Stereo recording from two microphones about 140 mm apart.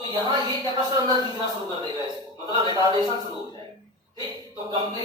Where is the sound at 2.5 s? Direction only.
30° right (ahead or behind).